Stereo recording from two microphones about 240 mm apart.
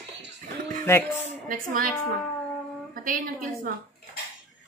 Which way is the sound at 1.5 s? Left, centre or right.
Right.